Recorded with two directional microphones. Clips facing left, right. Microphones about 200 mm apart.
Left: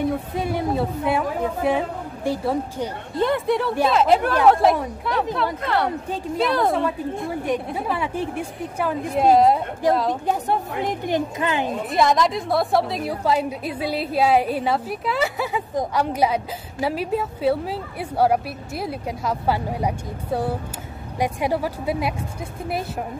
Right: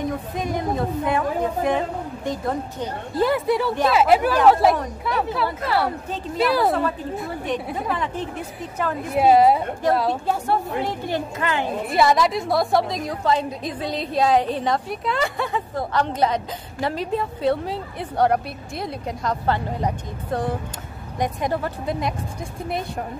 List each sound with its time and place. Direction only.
0.4 s a woman's voice: 10° left (ahead or behind)
3.2 s speech: 5° right (ahead or behind)
7.2 s a woman's voice: 10° left (ahead or behind)
9.1 s speech: 5° right (ahead or behind)
10.2 s a woman's voice: 20° left (ahead or behind)
11.9 s a woman's voice: 5° right (ahead or behind)